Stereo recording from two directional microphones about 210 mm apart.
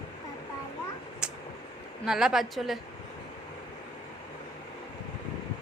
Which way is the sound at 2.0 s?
Centre (ahead or behind).